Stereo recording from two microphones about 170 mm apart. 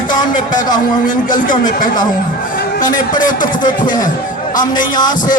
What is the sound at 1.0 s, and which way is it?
Speech, 50° left (ahead or behind).